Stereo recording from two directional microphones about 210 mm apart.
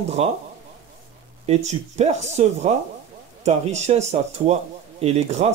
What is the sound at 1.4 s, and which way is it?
A man's voice, 30° right (ahead or behind).